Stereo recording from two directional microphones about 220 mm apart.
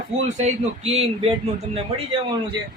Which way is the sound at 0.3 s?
30° right (ahead or behind).